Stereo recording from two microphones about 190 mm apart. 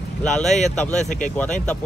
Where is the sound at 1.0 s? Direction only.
40° left (ahead or behind).